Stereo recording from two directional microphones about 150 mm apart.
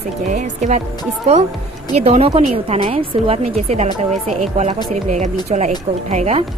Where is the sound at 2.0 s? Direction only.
45° right (ahead or behind).